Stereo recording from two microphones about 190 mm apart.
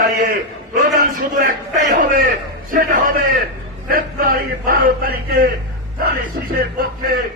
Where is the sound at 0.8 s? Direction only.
50° right (ahead or behind).